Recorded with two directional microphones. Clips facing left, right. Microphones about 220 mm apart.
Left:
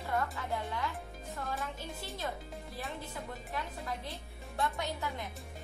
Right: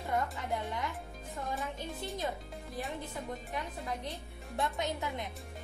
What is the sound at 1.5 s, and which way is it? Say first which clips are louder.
Speech: right 3 dB; centre (ahead or behind).